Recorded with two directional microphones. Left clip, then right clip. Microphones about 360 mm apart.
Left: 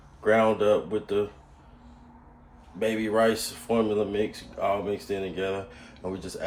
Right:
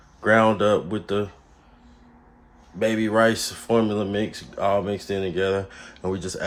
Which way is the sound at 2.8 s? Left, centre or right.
Right.